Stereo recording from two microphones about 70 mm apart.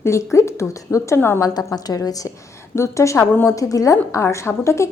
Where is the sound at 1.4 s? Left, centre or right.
Left.